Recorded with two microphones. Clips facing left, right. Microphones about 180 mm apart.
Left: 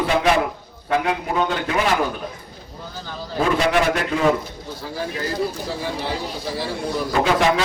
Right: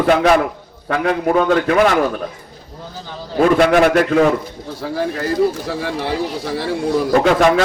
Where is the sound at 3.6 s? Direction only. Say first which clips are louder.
Right 6 dB; 55° right (ahead or behind).